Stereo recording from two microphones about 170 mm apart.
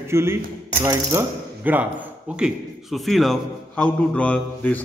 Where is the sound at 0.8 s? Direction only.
15° right (ahead or behind).